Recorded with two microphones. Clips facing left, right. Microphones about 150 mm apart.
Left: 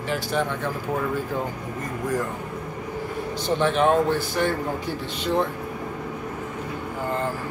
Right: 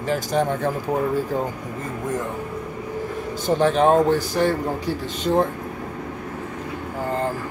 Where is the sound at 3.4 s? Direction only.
40° right (ahead or behind).